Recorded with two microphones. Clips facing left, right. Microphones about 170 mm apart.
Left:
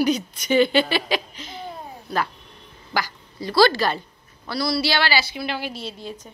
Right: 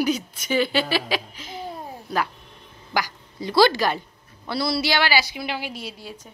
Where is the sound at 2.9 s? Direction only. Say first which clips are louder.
Even; 15° right (ahead or behind).